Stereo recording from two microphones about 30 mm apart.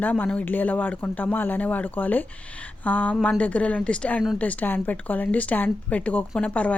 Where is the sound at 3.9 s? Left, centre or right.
Left.